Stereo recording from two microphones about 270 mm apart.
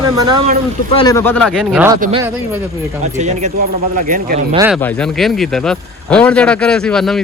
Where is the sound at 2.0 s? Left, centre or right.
Right.